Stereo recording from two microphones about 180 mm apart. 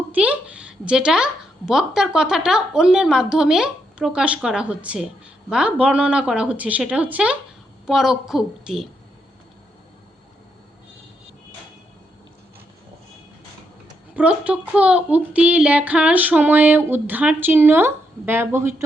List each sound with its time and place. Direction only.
0.1 s a woman's voice: 5° right (ahead or behind)
14.2 s speech: 5° right (ahead or behind)